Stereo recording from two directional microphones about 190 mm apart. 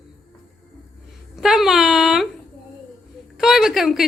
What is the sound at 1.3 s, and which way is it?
Speech, centre (ahead or behind).